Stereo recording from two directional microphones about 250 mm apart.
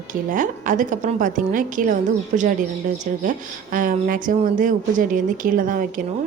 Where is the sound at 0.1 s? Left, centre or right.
Right.